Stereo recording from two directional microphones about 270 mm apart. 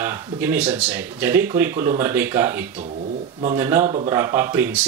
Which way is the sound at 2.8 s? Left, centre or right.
Right.